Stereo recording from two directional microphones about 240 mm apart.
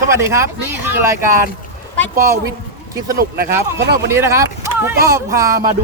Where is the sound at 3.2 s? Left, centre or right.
Right.